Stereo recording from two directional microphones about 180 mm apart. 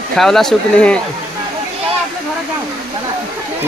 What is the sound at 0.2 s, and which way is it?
Speech, centre (ahead or behind).